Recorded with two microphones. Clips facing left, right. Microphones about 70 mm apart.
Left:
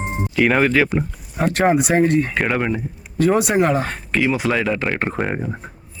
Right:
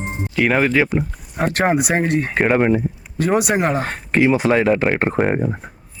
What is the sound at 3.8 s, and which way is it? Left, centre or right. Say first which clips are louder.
Speech: right 3 dB; right.